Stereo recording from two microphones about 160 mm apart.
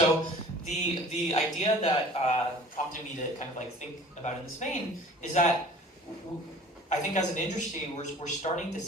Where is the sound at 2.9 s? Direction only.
50° left (ahead or behind).